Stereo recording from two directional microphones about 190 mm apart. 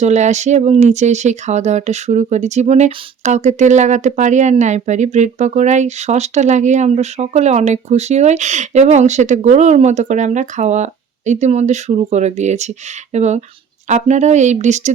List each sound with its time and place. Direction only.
0.0 s speech: 40° right (ahead or behind)